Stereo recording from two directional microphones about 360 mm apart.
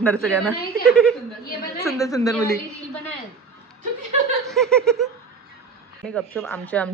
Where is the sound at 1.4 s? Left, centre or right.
Left.